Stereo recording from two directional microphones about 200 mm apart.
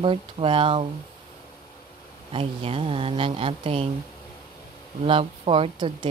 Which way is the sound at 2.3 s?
30° right (ahead or behind).